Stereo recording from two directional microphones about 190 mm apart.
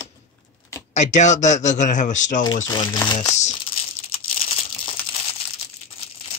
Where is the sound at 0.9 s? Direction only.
40° left (ahead or behind).